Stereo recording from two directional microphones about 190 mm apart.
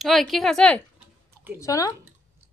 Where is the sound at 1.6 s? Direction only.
15° left (ahead or behind).